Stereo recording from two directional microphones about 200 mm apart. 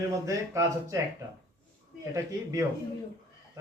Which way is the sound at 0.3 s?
15° right (ahead or behind).